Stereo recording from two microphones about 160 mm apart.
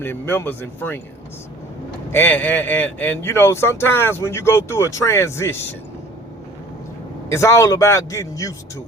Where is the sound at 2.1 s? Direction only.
10° left (ahead or behind).